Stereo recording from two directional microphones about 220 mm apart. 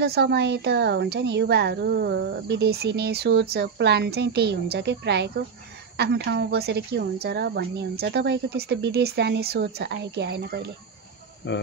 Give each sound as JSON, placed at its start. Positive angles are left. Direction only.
{"t": 0.0, "sound": "speech", "side_deg": -45}
{"t": 11.4, "sound": "cricket", "side_deg": 55}